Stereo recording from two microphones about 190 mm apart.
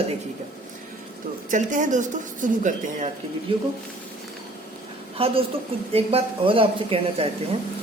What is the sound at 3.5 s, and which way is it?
Speech, 25° right (ahead or behind).